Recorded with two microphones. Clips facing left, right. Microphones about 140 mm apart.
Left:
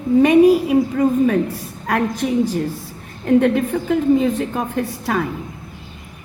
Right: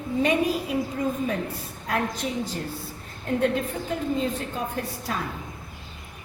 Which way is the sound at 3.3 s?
65° left (ahead or behind).